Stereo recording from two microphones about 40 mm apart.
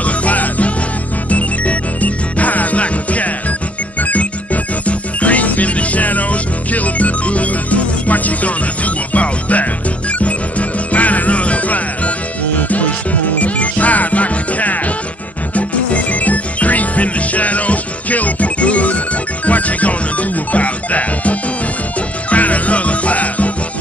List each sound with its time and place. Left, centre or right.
0.0 s music: left